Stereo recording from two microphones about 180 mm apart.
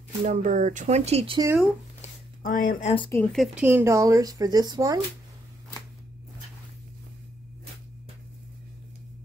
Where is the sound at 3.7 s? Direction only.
15° right (ahead or behind).